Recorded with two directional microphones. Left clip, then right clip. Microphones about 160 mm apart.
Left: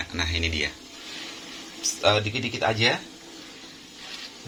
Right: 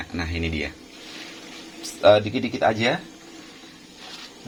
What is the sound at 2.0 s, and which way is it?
Speech, 50° right (ahead or behind).